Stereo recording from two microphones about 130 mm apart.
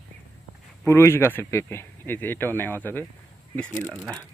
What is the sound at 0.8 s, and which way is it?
Speech, 20° left (ahead or behind).